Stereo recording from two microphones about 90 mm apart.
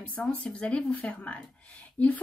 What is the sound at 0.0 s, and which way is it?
A woman's voice, 15° left (ahead or behind).